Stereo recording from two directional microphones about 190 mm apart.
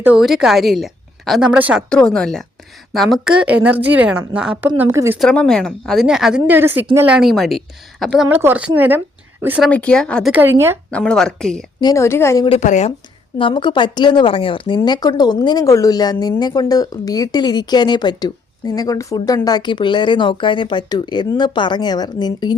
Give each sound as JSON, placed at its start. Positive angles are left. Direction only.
{"t": 0.0, "sound": "a woman's voice", "side_deg": -5}
{"t": 1.9, "sound": "a woman's voice", "side_deg": 5}
{"t": 5.2, "sound": "a woman's voice", "side_deg": 5}
{"t": 8.3, "sound": "a woman's voice", "side_deg": -10}
{"t": 9.6, "sound": "a woman's voice", "side_deg": 5}
{"t": 10.3, "sound": "a woman's voice", "side_deg": -10}
{"t": 10.9, "sound": "a woman's voice", "side_deg": 5}
{"t": 11.8, "sound": "a woman's voice", "side_deg": 20}
{"t": 12.5, "sound": "speech", "side_deg": 40}
{"t": 13.4, "sound": "speech", "side_deg": 25}